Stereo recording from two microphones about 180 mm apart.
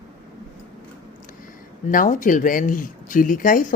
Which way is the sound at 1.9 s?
45° left (ahead or behind).